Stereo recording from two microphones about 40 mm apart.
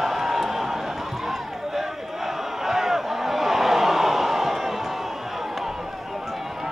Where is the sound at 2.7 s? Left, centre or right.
Centre.